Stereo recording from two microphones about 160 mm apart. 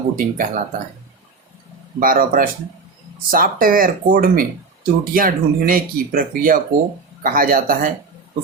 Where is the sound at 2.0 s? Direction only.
60° right (ahead or behind).